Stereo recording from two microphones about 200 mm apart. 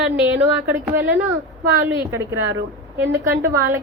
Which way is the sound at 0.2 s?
10° right (ahead or behind).